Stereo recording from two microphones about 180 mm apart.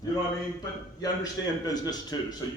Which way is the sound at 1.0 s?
20° left (ahead or behind).